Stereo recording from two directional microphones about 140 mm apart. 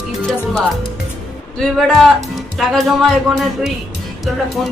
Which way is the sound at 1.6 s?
Centre (ahead or behind).